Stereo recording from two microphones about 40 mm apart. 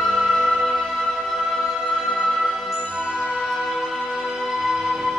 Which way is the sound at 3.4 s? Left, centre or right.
Centre.